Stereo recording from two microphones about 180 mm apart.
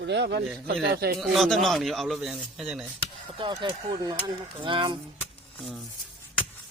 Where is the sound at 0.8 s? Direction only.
60° right (ahead or behind).